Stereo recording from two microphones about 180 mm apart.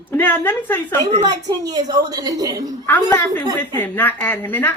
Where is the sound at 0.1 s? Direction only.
10° left (ahead or behind).